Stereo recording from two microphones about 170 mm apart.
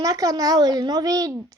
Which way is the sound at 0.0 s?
20° right (ahead or behind).